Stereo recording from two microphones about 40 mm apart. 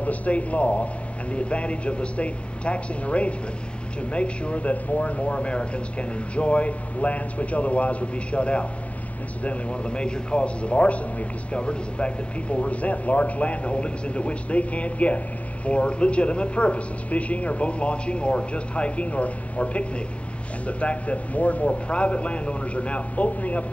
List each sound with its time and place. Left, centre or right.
0.0 s a man's voice: left